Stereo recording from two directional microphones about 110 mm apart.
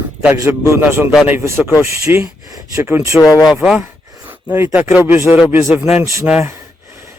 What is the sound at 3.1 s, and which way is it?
Speech, centre (ahead or behind).